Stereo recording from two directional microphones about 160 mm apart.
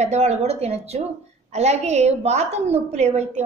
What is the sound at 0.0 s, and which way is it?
A woman's voice, 45° right (ahead or behind).